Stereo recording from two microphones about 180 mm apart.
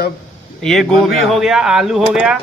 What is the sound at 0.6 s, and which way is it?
A man's voice, centre (ahead or behind).